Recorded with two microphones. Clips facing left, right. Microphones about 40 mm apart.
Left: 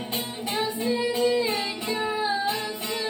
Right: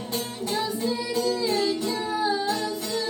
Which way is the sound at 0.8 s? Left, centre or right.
Left.